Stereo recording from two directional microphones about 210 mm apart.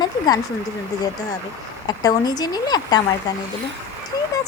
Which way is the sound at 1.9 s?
20° left (ahead or behind).